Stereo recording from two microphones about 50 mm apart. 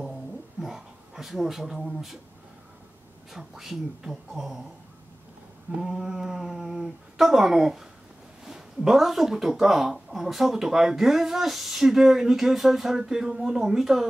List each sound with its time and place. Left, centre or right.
0.0 s a sound: centre
3.3 s speech: centre
5.8 s speech: centre